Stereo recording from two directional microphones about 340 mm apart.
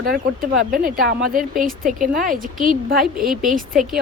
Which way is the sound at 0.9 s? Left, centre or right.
Right.